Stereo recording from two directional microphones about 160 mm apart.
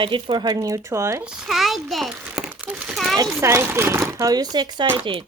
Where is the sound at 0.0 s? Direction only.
30° right (ahead or behind).